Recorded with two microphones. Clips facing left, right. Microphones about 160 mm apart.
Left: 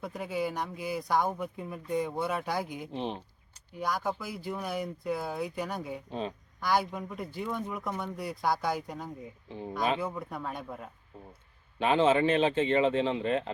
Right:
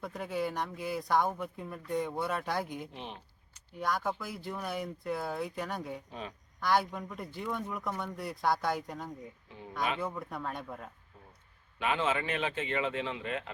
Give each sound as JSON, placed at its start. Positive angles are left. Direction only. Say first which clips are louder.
{"t": 0.0, "sound": "speech", "louder": "left 2 dB", "side_deg": 0}
{"t": 2.9, "sound": "a sound", "louder": "left 9 dB", "side_deg": 30}
{"t": 3.8, "sound": "speech", "louder": "left 1 dB", "side_deg": 0}
{"t": 6.1, "sound": "speech", "louder": "left 7 dB", "side_deg": 30}
{"t": 6.6, "sound": "speech", "louder": "left 1 dB", "side_deg": 0}
{"t": 9.5, "sound": "speech", "louder": "left 8 dB", "side_deg": 30}
{"t": 10.0, "sound": "speech", "louder": "left 2 dB", "side_deg": 0}
{"t": 11.8, "sound": "speech", "louder": "left 7 dB", "side_deg": 30}